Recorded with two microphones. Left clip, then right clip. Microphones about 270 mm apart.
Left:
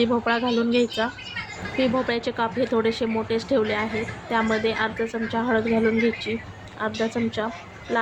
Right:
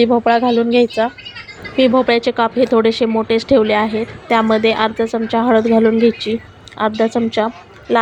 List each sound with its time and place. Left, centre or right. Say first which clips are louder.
0.0 s a woman's voice: right 10 dB; right